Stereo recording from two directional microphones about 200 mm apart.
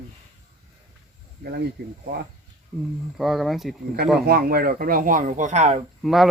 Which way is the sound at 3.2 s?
Centre (ahead or behind).